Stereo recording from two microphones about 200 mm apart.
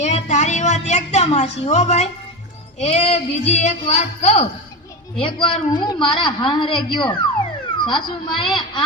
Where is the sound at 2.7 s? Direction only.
35° left (ahead or behind).